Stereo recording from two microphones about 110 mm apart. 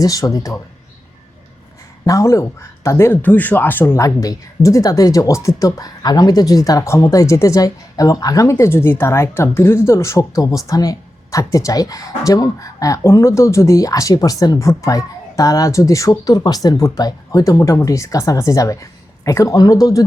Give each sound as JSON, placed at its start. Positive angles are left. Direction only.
{"t": 0.0, "sound": "a woman's voice", "side_deg": 35}
{"t": 2.0, "sound": "speech", "side_deg": 30}
{"t": 4.0, "sound": "a woman's voice", "side_deg": 30}